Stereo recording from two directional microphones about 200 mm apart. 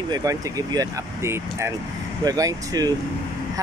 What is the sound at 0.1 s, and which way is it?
Speech, 15° right (ahead or behind).